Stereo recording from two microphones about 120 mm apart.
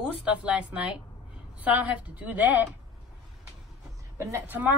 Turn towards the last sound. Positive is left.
turn(degrees=-25)  # may be behind; listen again after turning